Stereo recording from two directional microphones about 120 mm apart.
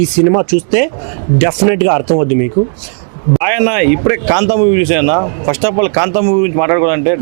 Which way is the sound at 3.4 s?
15° right (ahead or behind).